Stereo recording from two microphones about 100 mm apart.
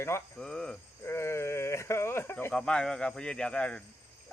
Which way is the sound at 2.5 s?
10° left (ahead or behind).